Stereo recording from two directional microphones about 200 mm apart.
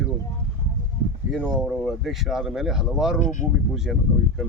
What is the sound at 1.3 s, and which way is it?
Speech, 5° left (ahead or behind).